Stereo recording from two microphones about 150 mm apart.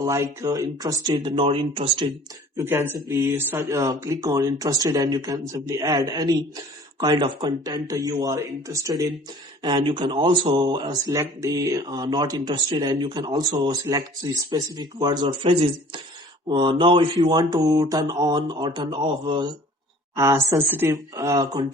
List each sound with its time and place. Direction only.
0.0 s speech: 20° right (ahead or behind); by 2.0 s 35° right (ahead or behind)
2.6 s speech: 15° right (ahead or behind); by 19.5 s 30° right (ahead or behind)
20.1 s speech: 20° right (ahead or behind)